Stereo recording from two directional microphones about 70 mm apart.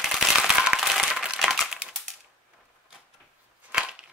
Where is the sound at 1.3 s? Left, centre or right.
Centre.